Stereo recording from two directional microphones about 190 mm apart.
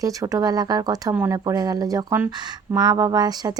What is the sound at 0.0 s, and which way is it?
Speech, 15° right (ahead or behind).